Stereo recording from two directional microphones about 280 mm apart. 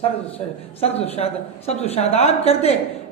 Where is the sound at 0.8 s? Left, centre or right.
Left.